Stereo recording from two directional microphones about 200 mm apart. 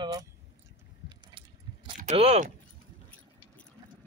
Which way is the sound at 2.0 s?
35° right (ahead or behind).